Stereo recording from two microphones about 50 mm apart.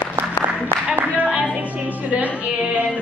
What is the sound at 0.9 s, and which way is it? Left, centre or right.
Singing, right.